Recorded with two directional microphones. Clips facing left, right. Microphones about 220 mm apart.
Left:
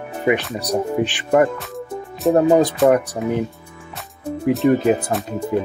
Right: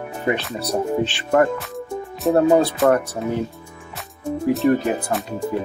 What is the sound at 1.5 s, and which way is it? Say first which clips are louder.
Music: right 1 dB; centre (ahead or behind).